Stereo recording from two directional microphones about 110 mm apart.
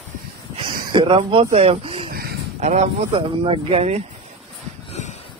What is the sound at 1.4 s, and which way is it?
Speech, 70° right (ahead or behind).